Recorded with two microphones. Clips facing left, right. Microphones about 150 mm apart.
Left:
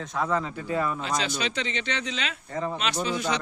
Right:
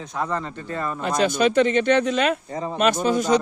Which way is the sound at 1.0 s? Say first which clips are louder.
Right 9 dB; 50° right (ahead or behind).